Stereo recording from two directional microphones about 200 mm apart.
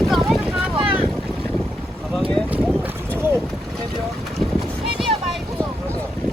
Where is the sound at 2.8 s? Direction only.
10° right (ahead or behind).